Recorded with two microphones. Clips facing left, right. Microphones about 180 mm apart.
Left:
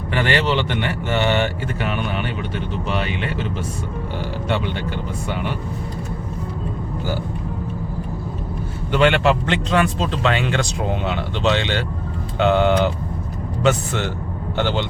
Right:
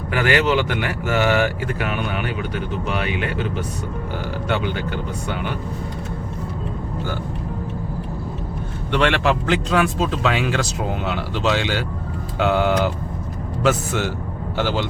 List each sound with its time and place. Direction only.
0.1 s speech: 5° right (ahead or behind)
8.9 s speech: centre (ahead or behind)